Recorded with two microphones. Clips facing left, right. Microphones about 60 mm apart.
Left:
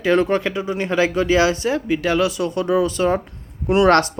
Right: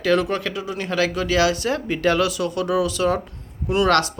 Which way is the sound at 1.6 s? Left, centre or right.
Centre.